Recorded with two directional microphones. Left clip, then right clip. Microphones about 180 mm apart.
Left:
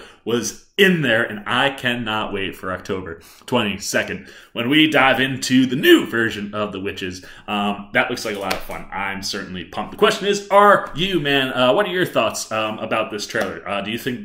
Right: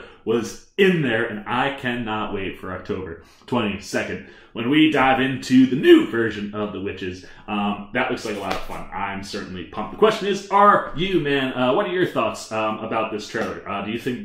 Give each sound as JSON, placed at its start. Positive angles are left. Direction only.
{"t": 0.3, "sound": "speech", "side_deg": 15}